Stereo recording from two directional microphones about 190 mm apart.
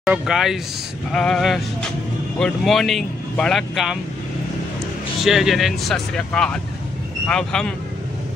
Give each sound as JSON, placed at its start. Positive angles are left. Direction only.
{"t": 0.0, "sound": "speech", "side_deg": 0}
{"t": 5.2, "sound": "speech", "side_deg": 0}